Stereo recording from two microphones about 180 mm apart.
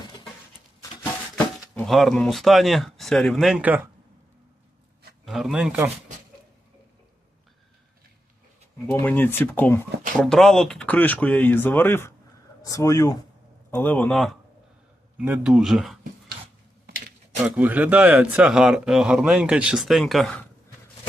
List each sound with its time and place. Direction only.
1.7 s speech: centre (ahead or behind)
5.2 s speech: centre (ahead or behind)
8.9 s speech: 10° left (ahead or behind)
17.4 s speech: 10° right (ahead or behind)